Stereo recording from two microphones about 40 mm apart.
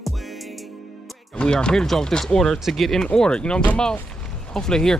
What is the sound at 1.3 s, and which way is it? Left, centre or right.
Speech, left.